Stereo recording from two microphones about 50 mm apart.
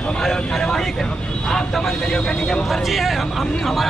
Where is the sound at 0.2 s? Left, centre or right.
Centre.